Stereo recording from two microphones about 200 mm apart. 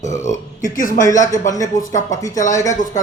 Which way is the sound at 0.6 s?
40° left (ahead or behind).